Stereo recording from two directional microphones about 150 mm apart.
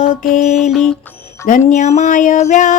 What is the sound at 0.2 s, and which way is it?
Music, 55° left (ahead or behind).